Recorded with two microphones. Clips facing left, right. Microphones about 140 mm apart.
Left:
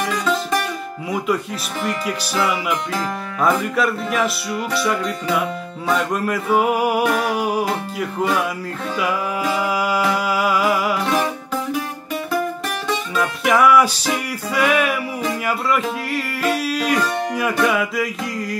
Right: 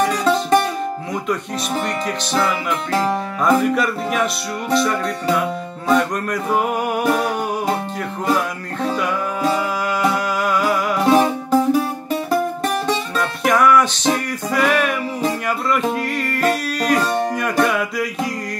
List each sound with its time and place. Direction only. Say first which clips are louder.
0.2 s music: right 5 dB; 30° right (ahead or behind)
1.9 s music: right 1 dB; 5° left (ahead or behind)
9.5 s music: left 2 dB; 5° left (ahead or behind)
11.1 s music: right 6 dB; 35° right (ahead or behind)
13.2 s music: left 1 dB; 5° left (ahead or behind)
16.1 s music: right 2 dB; 5° left (ahead or behind)